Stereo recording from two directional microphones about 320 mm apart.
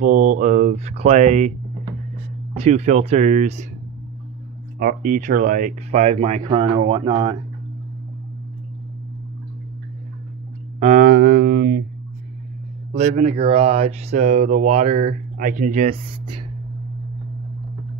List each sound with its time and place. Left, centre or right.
0.0 s speech: right
4.7 s speech: right
10.8 s a sound: right
12.9 s speech: centre